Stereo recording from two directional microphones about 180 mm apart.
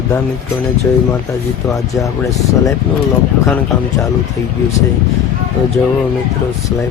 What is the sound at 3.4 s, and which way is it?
Speech, 15° left (ahead or behind).